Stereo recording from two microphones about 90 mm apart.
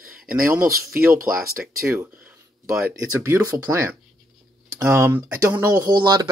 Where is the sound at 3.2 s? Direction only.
35° right (ahead or behind).